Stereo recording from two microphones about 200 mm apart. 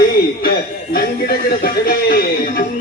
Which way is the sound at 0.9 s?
50° left (ahead or behind).